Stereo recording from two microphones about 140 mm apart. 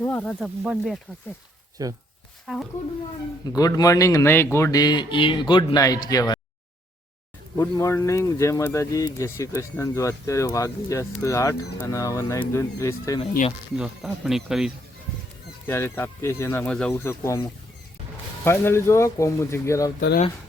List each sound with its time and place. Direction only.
0.0 s speech: 10° left (ahead or behind)
0.3 s speech: 5° right (ahead or behind)
1.8 s speech: 25° right (ahead or behind)
2.5 s speech: 5° right (ahead or behind)
3.4 s speech: 25° left (ahead or behind)
7.5 s speech: 20° left (ahead or behind)
13.7 s speech: 5° right (ahead or behind)
15.6 s speech: 15° left (ahead or behind)
17.0 s speech: 20° left (ahead or behind)
18.4 s speech: 15° left (ahead or behind)